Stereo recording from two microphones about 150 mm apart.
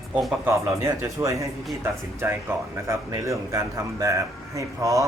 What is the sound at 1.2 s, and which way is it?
Speech, 20° right (ahead or behind).